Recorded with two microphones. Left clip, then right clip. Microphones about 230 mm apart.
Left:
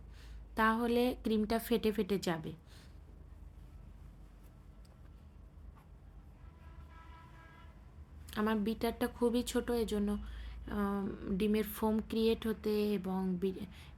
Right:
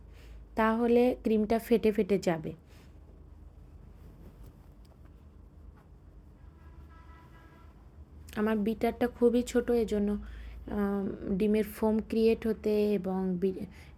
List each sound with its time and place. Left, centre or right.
0.5 s speech: centre
8.3 s speech: centre